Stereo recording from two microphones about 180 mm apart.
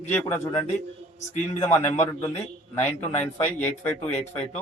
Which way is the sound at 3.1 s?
40° left (ahead or behind).